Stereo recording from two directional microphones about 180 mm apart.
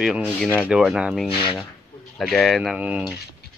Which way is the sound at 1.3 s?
30° left (ahead or behind).